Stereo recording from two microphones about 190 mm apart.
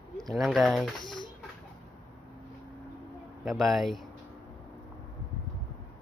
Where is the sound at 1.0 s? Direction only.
25° left (ahead or behind).